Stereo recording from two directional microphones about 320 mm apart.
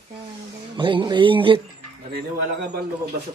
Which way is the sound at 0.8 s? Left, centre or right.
Centre.